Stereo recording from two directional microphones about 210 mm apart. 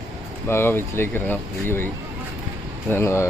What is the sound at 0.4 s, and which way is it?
Speech, 10° left (ahead or behind).